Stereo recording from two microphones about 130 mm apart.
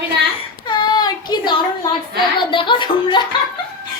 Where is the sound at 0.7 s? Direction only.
35° left (ahead or behind).